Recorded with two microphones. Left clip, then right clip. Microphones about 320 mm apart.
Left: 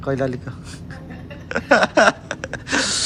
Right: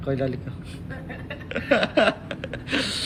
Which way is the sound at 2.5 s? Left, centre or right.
Centre.